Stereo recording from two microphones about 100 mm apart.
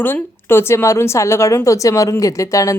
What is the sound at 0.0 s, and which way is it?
Speech, 20° left (ahead or behind).